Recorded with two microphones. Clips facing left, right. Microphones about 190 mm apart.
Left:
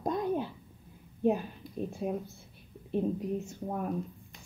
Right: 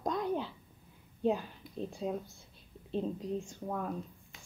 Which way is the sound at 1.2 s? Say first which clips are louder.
Left 3 dB; 15° left (ahead or behind).